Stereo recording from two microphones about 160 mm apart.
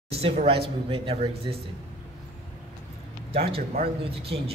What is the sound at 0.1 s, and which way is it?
Speech, 40° right (ahead or behind).